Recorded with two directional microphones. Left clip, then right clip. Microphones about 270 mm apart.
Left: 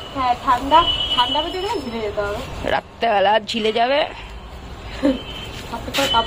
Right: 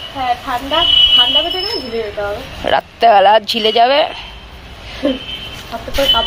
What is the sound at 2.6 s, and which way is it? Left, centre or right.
A woman's voice, centre.